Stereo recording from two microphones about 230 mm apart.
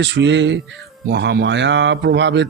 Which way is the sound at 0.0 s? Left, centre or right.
Right.